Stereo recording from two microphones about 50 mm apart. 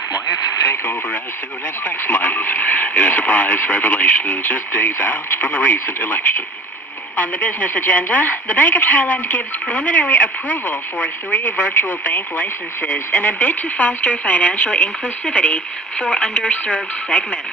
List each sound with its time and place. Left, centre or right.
2.0 s speech: left